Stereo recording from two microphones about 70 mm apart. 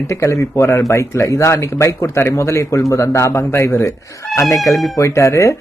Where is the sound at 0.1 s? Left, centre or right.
Left.